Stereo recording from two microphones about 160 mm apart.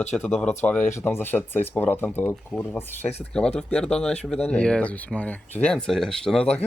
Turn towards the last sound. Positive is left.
turn(degrees=5)  # may be behind; listen again after turning